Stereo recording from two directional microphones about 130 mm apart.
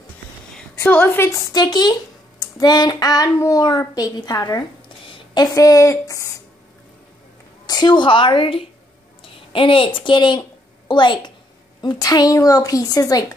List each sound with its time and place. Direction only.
0.7 s a woman's voice: 15° left (ahead or behind)
1.5 s a woman's voice: 30° left (ahead or behind)
7.6 s a woman's voice: 30° left (ahead or behind)